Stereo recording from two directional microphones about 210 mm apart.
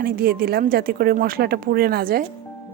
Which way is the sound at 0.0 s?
45° right (ahead or behind).